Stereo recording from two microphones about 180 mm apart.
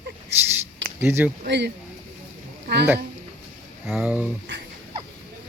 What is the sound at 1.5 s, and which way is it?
Speech, 70° right (ahead or behind).